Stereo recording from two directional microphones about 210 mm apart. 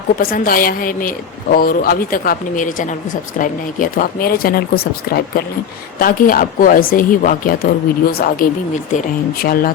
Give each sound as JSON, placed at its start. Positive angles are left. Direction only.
{"t": 0.2, "sound": "a woman's voice", "side_deg": 45}